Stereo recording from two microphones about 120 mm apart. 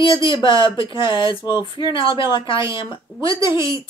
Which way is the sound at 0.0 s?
40° left (ahead or behind).